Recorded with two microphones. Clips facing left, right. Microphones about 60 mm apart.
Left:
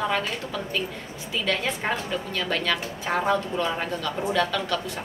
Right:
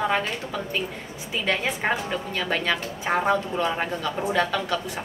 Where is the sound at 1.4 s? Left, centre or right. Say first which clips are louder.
Right 2 dB; centre.